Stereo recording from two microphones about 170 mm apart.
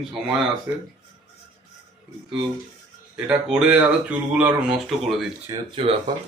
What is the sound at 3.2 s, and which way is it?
Speech, 5° right (ahead or behind).